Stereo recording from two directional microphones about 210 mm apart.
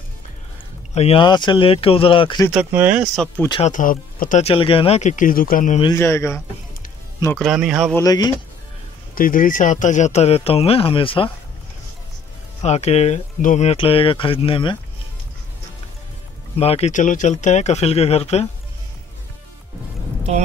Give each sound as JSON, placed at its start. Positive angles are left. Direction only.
{"t": 0.9, "sound": "speech", "side_deg": 25}
{"t": 2.5, "sound": "speech", "side_deg": -5}
{"t": 3.6, "sound": "speech", "side_deg": 40}
{"t": 5.9, "sound": "speech", "side_deg": 10}
{"t": 7.3, "sound": "speech", "side_deg": 0}
{"t": 7.9, "sound": "speech", "side_deg": 15}
{"t": 9.1, "sound": "speech", "side_deg": 40}
{"t": 12.6, "sound": "speech", "side_deg": 30}
{"t": 16.5, "sound": "speech", "side_deg": 30}